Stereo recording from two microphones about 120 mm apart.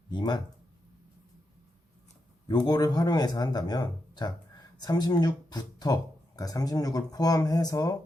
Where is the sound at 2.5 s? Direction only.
35° left (ahead or behind).